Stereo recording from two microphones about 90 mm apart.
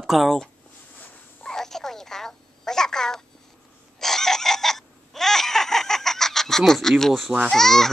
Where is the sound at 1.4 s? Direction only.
5° left (ahead or behind).